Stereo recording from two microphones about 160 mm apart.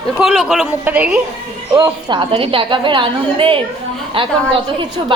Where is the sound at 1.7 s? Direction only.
25° right (ahead or behind).